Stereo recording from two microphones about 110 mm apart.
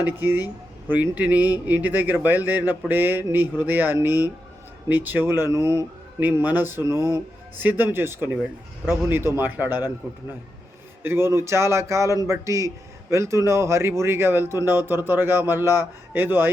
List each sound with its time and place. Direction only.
0.0 s speech: 20° right (ahead or behind)
6.1 s speech: 15° right (ahead or behind)